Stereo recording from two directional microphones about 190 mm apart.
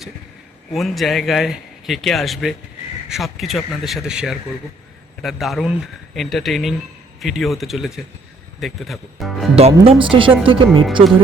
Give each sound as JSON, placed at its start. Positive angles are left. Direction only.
{"t": 0.7, "sound": "a man's voice", "side_deg": 0}
{"t": 9.6, "sound": "speech", "side_deg": -30}